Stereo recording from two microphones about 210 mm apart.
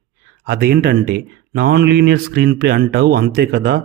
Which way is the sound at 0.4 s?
50° right (ahead or behind).